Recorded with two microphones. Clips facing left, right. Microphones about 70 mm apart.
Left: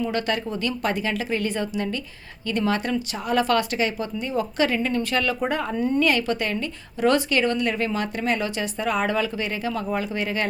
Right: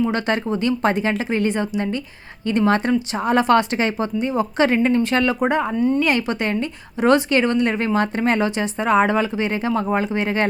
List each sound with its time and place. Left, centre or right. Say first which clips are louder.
0.0 s speech: right 4 dB; right
2.6 s speech: right 6 dB; right
8.4 s speech: right 6 dB; right